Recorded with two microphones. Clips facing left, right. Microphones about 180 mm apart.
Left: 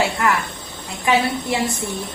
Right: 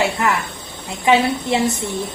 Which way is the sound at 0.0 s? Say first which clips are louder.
Right 1 dB; 20° right (ahead or behind).